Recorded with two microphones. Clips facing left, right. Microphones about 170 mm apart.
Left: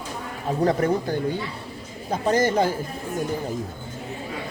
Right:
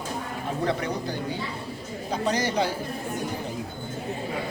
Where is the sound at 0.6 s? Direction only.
45° left (ahead or behind).